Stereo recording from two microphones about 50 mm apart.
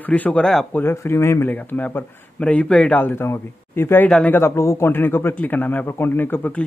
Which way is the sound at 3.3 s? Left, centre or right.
Left.